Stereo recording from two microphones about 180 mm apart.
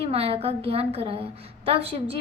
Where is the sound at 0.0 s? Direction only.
35° right (ahead or behind).